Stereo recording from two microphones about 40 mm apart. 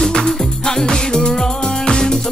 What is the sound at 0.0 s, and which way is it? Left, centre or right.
Music, centre.